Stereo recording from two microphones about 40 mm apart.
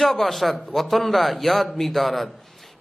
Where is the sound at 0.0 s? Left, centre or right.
Centre.